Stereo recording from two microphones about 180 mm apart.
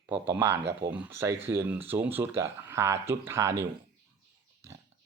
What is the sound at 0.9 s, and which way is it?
Speech, 10° right (ahead or behind).